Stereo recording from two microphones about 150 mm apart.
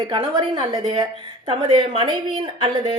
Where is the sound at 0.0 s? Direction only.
30° right (ahead or behind).